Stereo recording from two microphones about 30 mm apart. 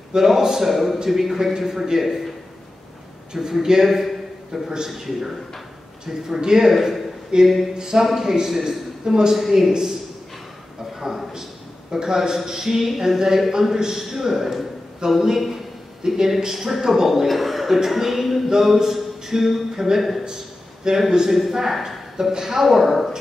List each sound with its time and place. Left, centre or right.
0.2 s a man's voice: centre
3.3 s a man's voice: centre
3.8 s a man's voice: centre
6.0 s a man's voice: centre
7.4 s a man's voice: centre
7.9 s a man's voice: centre
9.3 s a man's voice: centre
11.0 s a man's voice: centre
16.0 s speech: right
16.3 s a man's voice: centre
17.8 s a sound: centre
20.9 s speech: right
21.3 s a man's voice: centre